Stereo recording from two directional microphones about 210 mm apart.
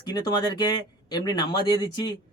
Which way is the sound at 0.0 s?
20° left (ahead or behind).